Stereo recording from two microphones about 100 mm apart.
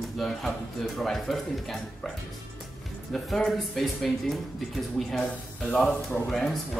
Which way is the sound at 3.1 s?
Centre (ahead or behind).